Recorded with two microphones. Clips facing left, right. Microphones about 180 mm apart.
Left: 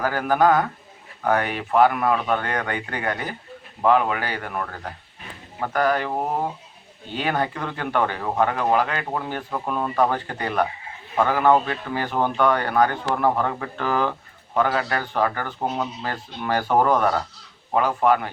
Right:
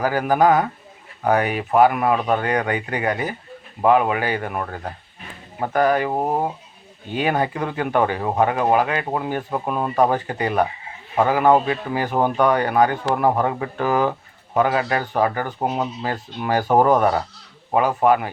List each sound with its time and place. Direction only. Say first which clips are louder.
0.0 s speech: right 2 dB; 15° right (ahead or behind)